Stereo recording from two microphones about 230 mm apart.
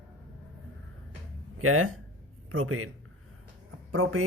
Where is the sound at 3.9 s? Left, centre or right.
Right.